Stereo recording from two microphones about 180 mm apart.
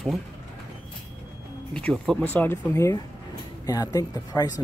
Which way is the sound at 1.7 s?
5° left (ahead or behind).